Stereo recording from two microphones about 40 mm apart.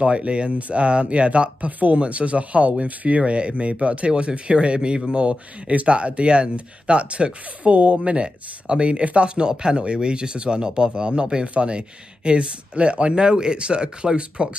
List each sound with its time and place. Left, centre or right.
0.0 s speech: right